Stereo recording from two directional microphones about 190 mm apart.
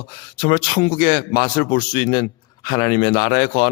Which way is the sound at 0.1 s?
25° left (ahead or behind).